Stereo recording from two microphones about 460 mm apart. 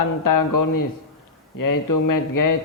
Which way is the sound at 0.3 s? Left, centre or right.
Left.